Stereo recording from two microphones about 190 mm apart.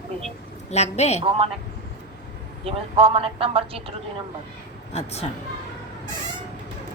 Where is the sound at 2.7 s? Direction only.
30° right (ahead or behind).